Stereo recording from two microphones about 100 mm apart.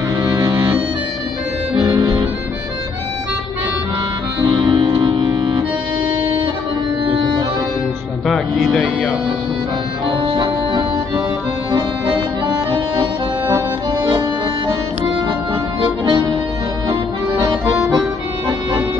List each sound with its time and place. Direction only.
0.2 s accordion: 40° right (ahead or behind)
1.8 s music: 40° right (ahead or behind)
4.5 s music: 55° right (ahead or behind)
8.3 s music: centre (ahead or behind)
10.2 s music: 55° right (ahead or behind)
12.4 s music: 45° right (ahead or behind)
15.8 s accordion: 50° right (ahead or behind)